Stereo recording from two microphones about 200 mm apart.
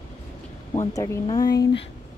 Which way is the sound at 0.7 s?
15° left (ahead or behind).